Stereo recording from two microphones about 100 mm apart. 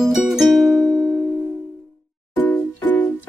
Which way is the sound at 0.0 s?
Centre (ahead or behind).